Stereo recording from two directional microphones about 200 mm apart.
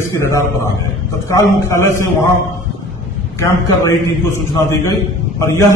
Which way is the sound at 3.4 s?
15° left (ahead or behind).